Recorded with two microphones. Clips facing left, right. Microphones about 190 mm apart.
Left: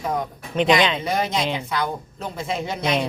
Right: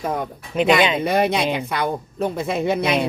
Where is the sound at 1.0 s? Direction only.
60° right (ahead or behind).